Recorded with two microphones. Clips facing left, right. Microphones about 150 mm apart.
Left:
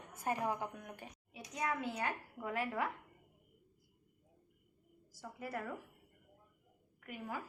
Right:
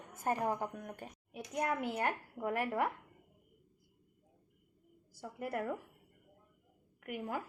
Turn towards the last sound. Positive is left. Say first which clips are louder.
# right 5 dB
turn(degrees=-60)  # may be behind; listen again after turning